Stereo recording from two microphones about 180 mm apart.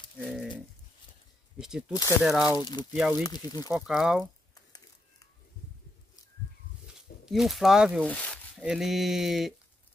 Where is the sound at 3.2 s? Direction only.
20° left (ahead or behind).